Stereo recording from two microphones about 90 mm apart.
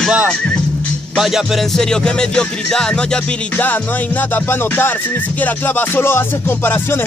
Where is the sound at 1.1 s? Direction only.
5° right (ahead or behind).